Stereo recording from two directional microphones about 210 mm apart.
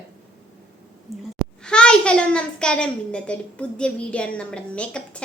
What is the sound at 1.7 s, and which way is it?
A child's voice, 5° left (ahead or behind).